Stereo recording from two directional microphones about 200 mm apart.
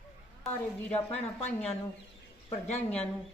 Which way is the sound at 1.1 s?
35° left (ahead or behind).